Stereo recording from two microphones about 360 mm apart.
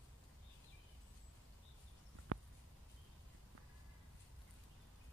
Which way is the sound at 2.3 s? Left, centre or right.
Right.